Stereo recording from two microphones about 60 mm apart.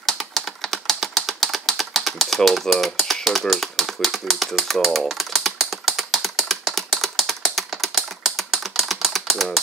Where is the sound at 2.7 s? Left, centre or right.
Centre.